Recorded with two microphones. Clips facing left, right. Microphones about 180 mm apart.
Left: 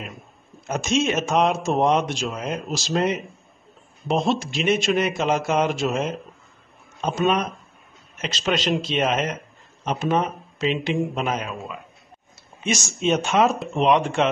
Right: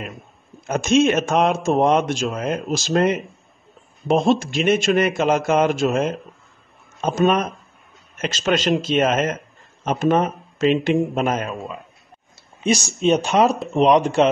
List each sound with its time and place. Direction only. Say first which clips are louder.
0.0 s a man's voice: right 3 dB; centre (ahead or behind)
4.1 s speech: right 5 dB; 50° right (ahead or behind)
4.4 s a man's voice: right 3 dB; centre (ahead or behind)
7.0 s speech: right 3 dB; 45° right (ahead or behind)
8.5 s a man's voice: right 4 dB; centre (ahead or behind)
9.8 s speech: right 4 dB; 45° right (ahead or behind)
12.6 s speech: right 6 dB; 35° right (ahead or behind)
13.0 s a man's voice: right 2 dB; centre (ahead or behind)
14.2 s speech: right 5 dB; 40° right (ahead or behind)